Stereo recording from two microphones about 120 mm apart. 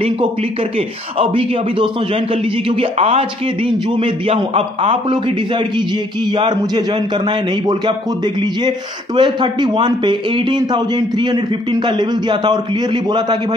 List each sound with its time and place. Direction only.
0.0 s a man's voice: 55° right (ahead or behind); by 13.4 s 40° right (ahead or behind)